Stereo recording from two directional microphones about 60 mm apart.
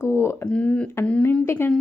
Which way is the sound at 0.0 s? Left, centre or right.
Left.